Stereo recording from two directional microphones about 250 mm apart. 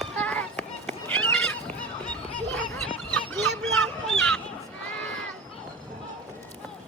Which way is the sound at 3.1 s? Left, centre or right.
Centre.